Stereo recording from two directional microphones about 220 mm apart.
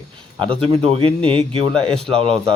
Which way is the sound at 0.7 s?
25° right (ahead or behind).